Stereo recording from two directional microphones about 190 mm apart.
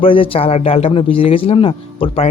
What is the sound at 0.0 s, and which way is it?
A man's voice, 30° left (ahead or behind).